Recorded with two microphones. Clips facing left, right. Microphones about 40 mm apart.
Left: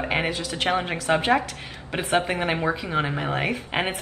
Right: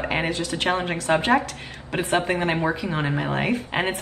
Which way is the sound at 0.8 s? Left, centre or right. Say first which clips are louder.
Even; centre.